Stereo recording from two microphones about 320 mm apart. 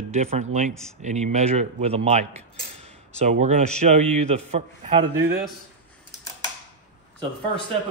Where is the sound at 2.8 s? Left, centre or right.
Right.